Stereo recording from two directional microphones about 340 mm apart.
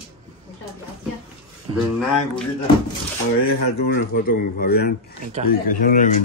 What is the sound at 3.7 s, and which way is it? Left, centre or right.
A man's voice, left.